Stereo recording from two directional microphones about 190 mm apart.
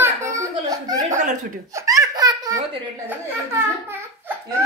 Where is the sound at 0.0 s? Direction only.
15° right (ahead or behind).